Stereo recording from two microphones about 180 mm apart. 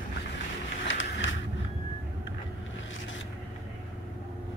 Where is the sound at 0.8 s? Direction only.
90° left.